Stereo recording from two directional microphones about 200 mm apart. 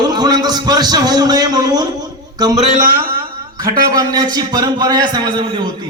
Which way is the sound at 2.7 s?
45° right (ahead or behind).